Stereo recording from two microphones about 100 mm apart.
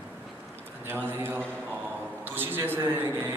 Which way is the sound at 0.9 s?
20° right (ahead or behind).